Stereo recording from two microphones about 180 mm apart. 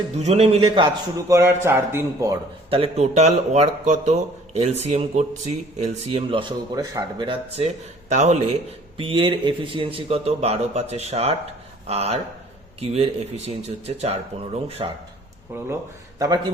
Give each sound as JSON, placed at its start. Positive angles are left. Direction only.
{"t": 0.2, "sound": "speech", "side_deg": -35}
{"t": 1.3, "sound": "a man's voice", "side_deg": -15}
{"t": 2.6, "sound": "speech", "side_deg": -30}
{"t": 15.5, "sound": "speech", "side_deg": -15}